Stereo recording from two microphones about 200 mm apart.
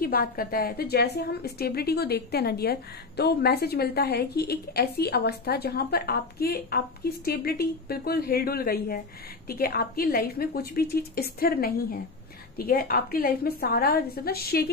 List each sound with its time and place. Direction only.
0.0 s a woman's voice: 45° left (ahead or behind)